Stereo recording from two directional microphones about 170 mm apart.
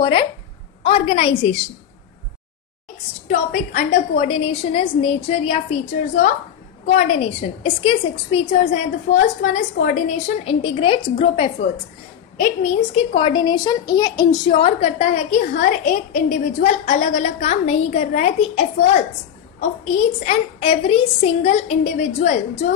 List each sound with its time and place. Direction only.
0.0 s a woman's voice: 30° left (ahead or behind)
3.3 s a woman's voice: 50° left (ahead or behind)
7.6 s a woman's voice: 35° left (ahead or behind)
12.4 s a woman's voice: 50° left (ahead or behind)
12.9 s a woman's voice: 30° left (ahead or behind)
14.6 s a woman's voice: 40° left (ahead or behind)